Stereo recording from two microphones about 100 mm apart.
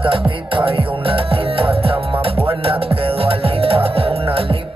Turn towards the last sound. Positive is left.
turn(degrees=-70)  # may be behind; listen again after turning